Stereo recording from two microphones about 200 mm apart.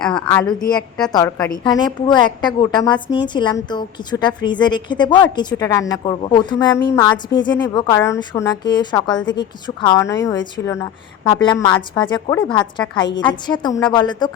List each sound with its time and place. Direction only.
0.0 s a woman's voice: 5° left (ahead or behind); by 0.8 s 20° left (ahead or behind)
0.8 s a woman's voice: 5° left (ahead or behind)
1.1 s a woman's voice: 20° left (ahead or behind)